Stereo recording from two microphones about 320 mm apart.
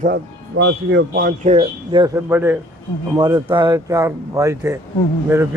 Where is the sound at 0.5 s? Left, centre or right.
Right; by 4.8 s centre.